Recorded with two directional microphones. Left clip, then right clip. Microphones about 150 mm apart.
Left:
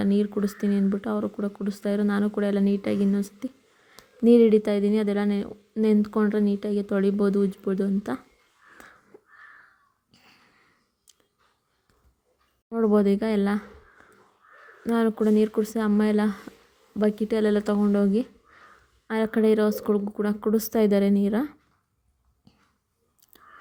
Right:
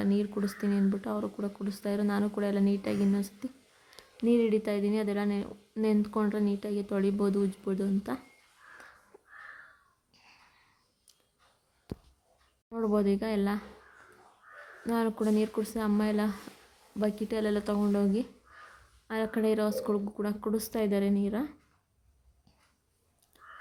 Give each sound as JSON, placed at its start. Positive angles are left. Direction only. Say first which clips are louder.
{"t": 0.0, "sound": "speech", "louder": "left 6 dB", "side_deg": 25}
{"t": 4.3, "sound": "speech", "louder": "left 9 dB", "side_deg": 35}
{"t": 9.1, "sound": "wheeze", "louder": "left 6 dB", "side_deg": 15}
{"t": 10.1, "sound": "a sound", "louder": "left 3 dB", "side_deg": 20}
{"t": 12.6, "sound": "speech", "louder": "left 7 dB", "side_deg": 30}
{"t": 14.8, "sound": "speech", "louder": "left 7 dB", "side_deg": 25}
{"t": 23.3, "sound": "whispering", "louder": "left 1 dB", "side_deg": 35}